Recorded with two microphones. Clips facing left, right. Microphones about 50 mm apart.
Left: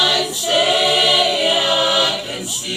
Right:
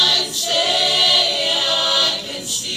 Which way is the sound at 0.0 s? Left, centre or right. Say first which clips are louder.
Left 2 dB; centre.